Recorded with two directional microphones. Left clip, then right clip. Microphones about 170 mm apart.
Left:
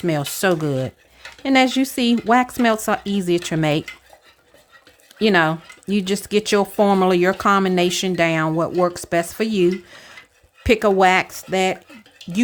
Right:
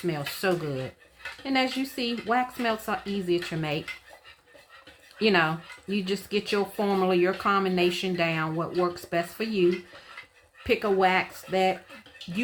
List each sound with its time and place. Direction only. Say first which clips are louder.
0.0 s speech: left 8 dB; 85° left
5.2 s speech: left 7 dB; 70° left (ahead or behind); by 11.8 s 85° left